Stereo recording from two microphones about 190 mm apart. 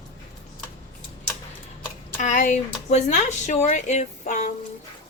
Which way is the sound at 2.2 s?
40° left (ahead or behind).